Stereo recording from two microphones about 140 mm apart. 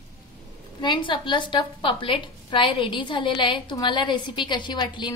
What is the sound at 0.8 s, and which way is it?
A woman's voice, 35° left (ahead or behind).